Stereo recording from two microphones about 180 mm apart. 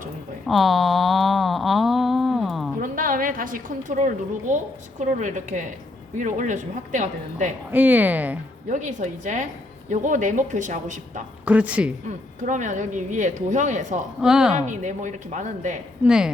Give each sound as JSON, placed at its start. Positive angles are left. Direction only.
{"t": 0.4, "sound": "a sound", "side_deg": 0}
{"t": 2.8, "sound": "a woman's voice", "side_deg": -50}
{"t": 7.7, "sound": "speech", "side_deg": -10}
{"t": 8.7, "sound": "a woman's voice", "side_deg": -45}
{"t": 11.4, "sound": "speech", "side_deg": -5}
{"t": 12.0, "sound": "a woman's voice", "side_deg": -45}
{"t": 14.2, "sound": "a woman's voice", "side_deg": -5}
{"t": 14.5, "sound": "a woman's voice", "side_deg": -45}
{"t": 16.0, "sound": "a woman's voice", "side_deg": -5}